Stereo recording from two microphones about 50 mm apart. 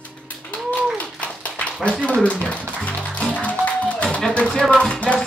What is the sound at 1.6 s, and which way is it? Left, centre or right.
Speech, left.